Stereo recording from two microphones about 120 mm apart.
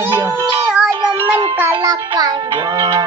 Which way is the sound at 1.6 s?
25° right (ahead or behind).